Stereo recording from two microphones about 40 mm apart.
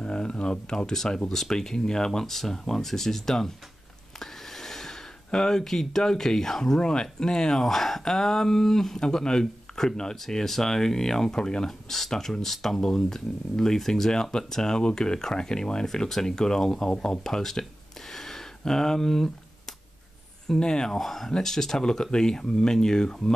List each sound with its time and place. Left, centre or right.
0.0 s speech: left
4.2 s a sound: centre
6.8 s speech: left
20.4 s speech: centre
20.9 s speech: centre